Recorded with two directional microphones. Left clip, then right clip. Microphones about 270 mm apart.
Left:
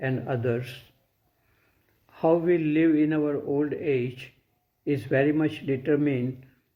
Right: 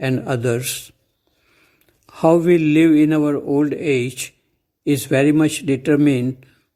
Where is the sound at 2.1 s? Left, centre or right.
Right.